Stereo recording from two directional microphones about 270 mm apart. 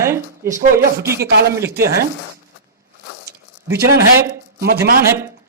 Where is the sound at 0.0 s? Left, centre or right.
Centre.